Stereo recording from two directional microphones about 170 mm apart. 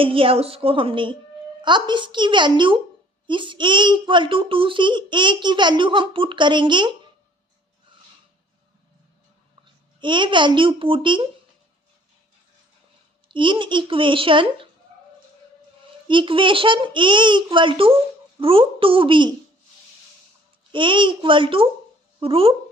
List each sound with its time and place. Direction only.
0.0 s a woman's voice: 30° right (ahead or behind)
10.0 s a child's voice: 25° right (ahead or behind)
13.2 s a child's voice: 30° right (ahead or behind)
16.0 s a child's voice: 30° right (ahead or behind)
20.7 s a child's voice: 30° right (ahead or behind)